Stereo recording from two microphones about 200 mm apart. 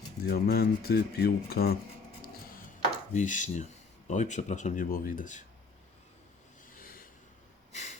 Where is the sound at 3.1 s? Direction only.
40° left (ahead or behind).